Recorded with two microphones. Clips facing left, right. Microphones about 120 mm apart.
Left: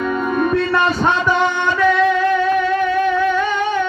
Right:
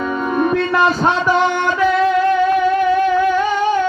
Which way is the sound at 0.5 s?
5° right (ahead or behind).